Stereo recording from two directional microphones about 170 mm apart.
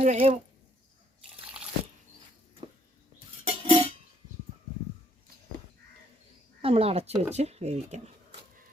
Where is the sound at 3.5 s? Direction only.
35° right (ahead or behind).